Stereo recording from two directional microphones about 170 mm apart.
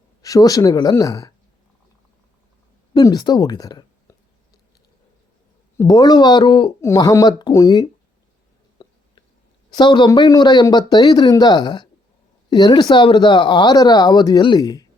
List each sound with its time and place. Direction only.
0.2 s speech: 20° left (ahead or behind)
2.9 s speech: 25° left (ahead or behind)
5.7 s speech: 20° left (ahead or behind)
8.8 s a sound: 20° left (ahead or behind)
9.7 s speech: 25° left (ahead or behind)